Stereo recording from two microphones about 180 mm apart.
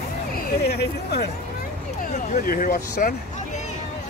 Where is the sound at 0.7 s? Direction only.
60° left (ahead or behind).